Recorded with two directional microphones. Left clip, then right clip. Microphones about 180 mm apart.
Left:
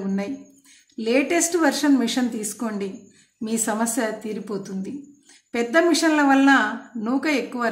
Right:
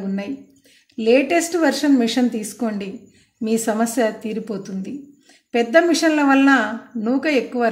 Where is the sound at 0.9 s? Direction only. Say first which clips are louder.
Right 5 dB; 15° right (ahead or behind).